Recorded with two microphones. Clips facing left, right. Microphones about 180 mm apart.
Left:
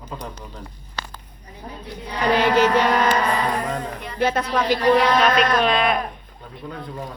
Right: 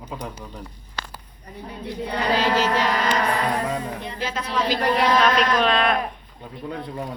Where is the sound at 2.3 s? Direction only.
60° left (ahead or behind).